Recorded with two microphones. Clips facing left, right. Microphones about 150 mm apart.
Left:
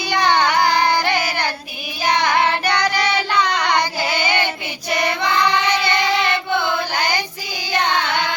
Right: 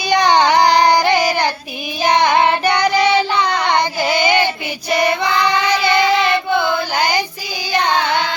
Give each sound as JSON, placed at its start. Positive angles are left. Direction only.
{"t": 0.0, "sound": "carnatic music", "side_deg": -15}
{"t": 2.0, "sound": "child singing", "side_deg": -20}
{"t": 4.1, "sound": "child singing", "side_deg": -15}